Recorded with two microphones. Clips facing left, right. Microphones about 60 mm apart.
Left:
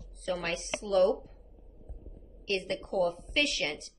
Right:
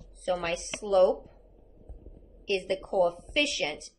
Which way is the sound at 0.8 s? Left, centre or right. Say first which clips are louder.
Right 3 dB; right.